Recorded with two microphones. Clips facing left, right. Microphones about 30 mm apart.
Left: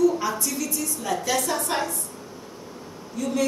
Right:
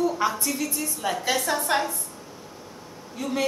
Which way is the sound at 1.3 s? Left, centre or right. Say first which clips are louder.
Right 2 dB; centre.